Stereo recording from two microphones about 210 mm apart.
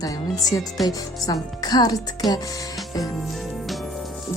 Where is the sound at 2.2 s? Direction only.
Centre (ahead or behind).